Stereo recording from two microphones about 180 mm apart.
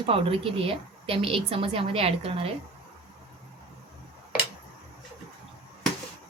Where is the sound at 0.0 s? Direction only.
30° right (ahead or behind).